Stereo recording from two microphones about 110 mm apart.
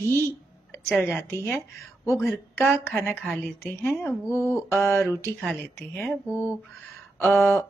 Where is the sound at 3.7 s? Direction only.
20° left (ahead or behind).